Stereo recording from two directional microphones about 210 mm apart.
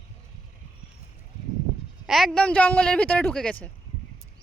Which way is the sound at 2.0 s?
Centre (ahead or behind).